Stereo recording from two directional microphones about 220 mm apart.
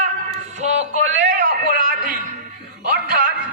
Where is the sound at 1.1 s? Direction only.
50° right (ahead or behind).